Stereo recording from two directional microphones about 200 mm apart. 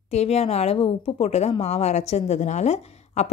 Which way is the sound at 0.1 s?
30° left (ahead or behind).